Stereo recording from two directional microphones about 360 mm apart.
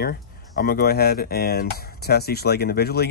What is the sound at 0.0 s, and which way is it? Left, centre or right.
Speech, left.